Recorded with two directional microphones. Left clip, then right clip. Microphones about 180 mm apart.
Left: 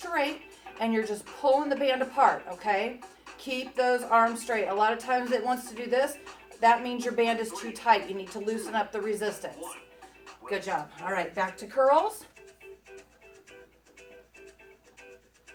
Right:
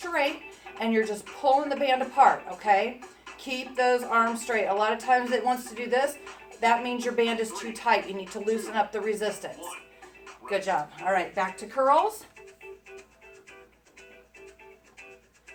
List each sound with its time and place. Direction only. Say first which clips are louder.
0.0 s speech: right 2 dB; centre (ahead or behind)
10.4 s speech: right 4 dB; 20° left (ahead or behind)
11.1 s speech: right 3 dB; centre (ahead or behind)